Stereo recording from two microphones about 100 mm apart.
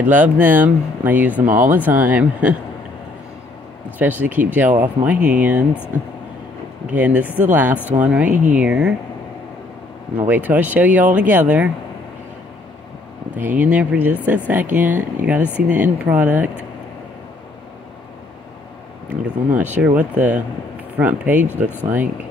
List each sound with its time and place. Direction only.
0.0 s speech: 20° right (ahead or behind)
4.0 s speech: 15° right (ahead or behind)
10.1 s speech: 15° right (ahead or behind)
13.4 s speech: 15° right (ahead or behind)
19.0 s speech: 15° right (ahead or behind)